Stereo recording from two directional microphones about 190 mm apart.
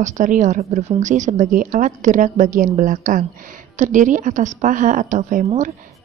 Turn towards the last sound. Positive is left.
turn(degrees=-40)  # may be behind; listen again after turning